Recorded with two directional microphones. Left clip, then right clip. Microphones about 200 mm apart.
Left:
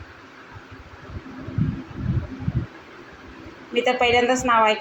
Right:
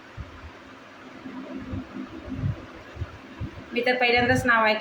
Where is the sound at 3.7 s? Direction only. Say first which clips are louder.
Left 3 dB; centre (ahead or behind).